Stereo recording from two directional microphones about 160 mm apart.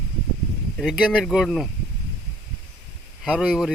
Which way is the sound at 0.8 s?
Centre (ahead or behind).